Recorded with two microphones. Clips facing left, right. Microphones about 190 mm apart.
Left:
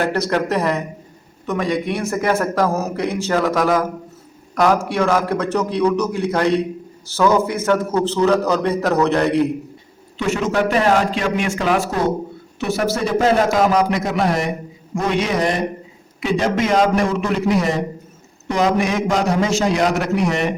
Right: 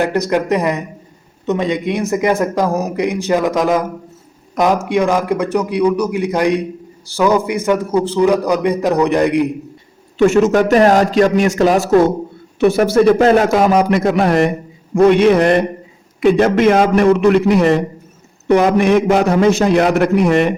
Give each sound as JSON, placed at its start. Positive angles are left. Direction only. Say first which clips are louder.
{"t": 0.0, "sound": "a man's voice", "louder": "right 3 dB", "side_deg": -15}
{"t": 10.2, "sound": "a man's voice", "louder": "right 8 dB", "side_deg": -45}
{"t": 12.5, "sound": "a man's voice", "louder": "right 9 dB", "side_deg": -55}